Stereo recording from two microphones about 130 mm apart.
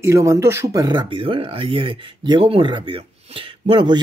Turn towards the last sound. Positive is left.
turn(degrees=-40)  # may be behind; listen again after turning